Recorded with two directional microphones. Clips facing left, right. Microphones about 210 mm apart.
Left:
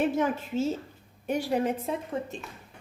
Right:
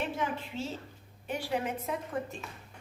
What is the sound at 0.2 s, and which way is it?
A woman's voice, 45° left (ahead or behind).